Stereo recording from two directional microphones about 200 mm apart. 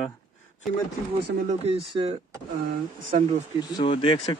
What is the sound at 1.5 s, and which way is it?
Speech, 30° right (ahead or behind).